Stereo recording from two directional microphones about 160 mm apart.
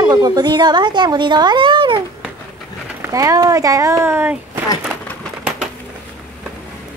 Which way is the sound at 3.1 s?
20° right (ahead or behind).